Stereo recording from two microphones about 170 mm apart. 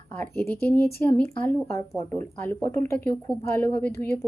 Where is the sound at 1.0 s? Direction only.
10° left (ahead or behind).